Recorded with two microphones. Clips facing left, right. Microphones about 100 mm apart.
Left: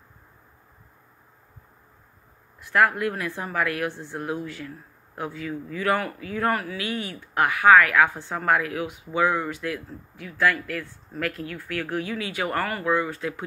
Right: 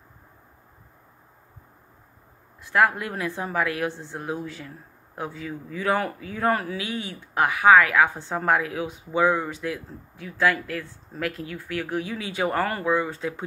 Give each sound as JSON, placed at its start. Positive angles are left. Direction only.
{"t": 2.6, "sound": "speech", "side_deg": -20}